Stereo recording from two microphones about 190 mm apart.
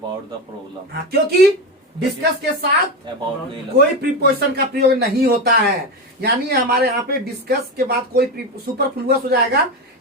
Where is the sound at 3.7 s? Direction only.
55° right (ahead or behind).